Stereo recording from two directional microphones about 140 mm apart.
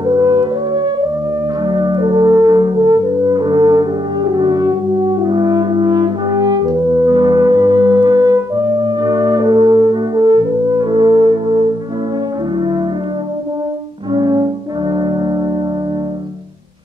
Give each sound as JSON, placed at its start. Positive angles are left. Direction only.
{"t": 0.0, "sound": "french horn", "side_deg": -30}
{"t": 14.1, "sound": "french horn", "side_deg": -30}